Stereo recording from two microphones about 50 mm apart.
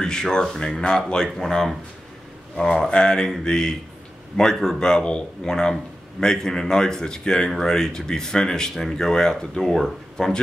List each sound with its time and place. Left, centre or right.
0.0 s speech: centre